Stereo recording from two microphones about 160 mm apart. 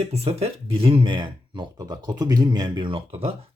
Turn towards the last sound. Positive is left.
turn(degrees=-35)  # may be behind; listen again after turning